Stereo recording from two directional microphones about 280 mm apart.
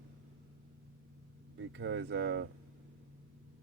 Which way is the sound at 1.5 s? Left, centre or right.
Right.